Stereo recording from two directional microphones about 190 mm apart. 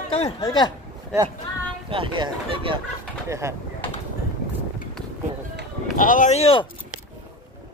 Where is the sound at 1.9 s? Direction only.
25° right (ahead or behind).